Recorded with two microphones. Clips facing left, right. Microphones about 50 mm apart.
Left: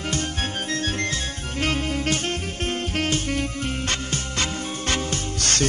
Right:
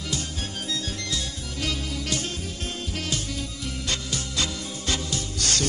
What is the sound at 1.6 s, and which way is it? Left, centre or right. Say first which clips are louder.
Music: left 6 dB; left.